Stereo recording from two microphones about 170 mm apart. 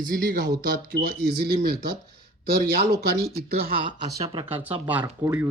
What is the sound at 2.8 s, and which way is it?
Speech, 70° right (ahead or behind).